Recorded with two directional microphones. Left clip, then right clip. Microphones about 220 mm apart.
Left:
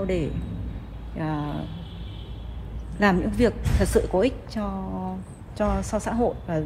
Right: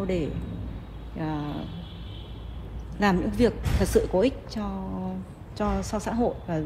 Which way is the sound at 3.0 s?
30° left (ahead or behind).